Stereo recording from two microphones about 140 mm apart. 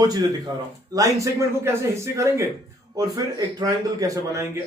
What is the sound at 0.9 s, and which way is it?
A man's voice, 25° right (ahead or behind).